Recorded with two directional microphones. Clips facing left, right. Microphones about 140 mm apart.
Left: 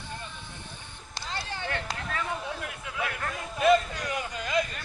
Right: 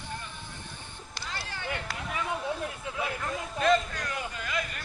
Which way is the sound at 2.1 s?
10° right (ahead or behind).